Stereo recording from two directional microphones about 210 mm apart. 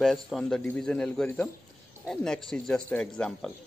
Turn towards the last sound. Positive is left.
turn(degrees=5)  # may be behind; listen again after turning